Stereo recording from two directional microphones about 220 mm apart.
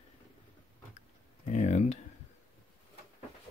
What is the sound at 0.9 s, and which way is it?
Typing, 30° left (ahead or behind).